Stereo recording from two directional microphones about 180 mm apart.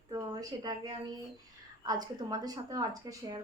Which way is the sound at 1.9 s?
20° right (ahead or behind).